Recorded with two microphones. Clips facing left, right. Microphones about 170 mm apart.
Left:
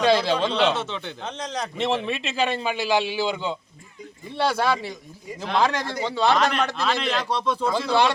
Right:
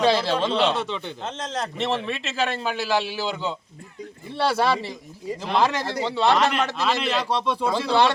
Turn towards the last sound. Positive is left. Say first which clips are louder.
# even
turn(degrees=-10)  # may be behind; listen again after turning